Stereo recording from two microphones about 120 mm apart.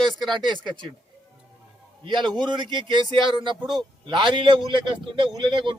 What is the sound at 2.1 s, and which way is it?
A man's voice, 40° right (ahead or behind).